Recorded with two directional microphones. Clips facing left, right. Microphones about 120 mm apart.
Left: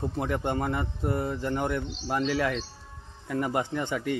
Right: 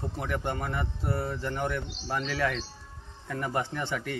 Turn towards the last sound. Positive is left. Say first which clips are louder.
# left 4 dB
turn(degrees=20)  # may be behind; listen again after turning